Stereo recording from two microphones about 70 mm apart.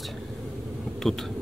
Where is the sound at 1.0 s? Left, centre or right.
Centre.